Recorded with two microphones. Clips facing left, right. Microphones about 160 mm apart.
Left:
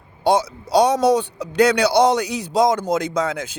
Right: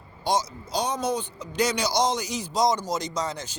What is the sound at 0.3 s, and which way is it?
A man's voice, 60° left (ahead or behind).